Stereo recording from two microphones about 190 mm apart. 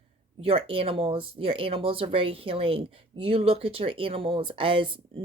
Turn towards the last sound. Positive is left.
turn(degrees=-25)  # may be behind; listen again after turning